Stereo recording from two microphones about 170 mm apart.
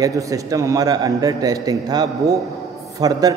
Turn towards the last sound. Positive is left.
turn(degrees=-20)  # may be behind; listen again after turning